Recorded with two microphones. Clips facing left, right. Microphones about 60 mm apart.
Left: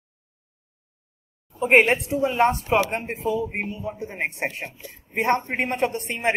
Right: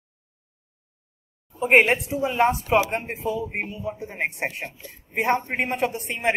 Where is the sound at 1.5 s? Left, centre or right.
Centre.